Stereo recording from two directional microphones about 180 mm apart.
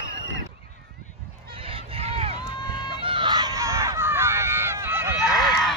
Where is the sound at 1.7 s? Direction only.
30° right (ahead or behind).